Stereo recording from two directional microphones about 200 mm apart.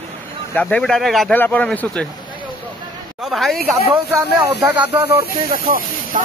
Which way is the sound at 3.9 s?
15° right (ahead or behind).